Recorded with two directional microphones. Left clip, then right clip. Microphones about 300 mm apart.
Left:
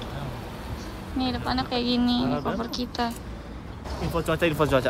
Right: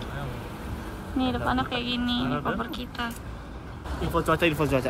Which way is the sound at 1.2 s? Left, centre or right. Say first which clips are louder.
Right 1 dB; centre.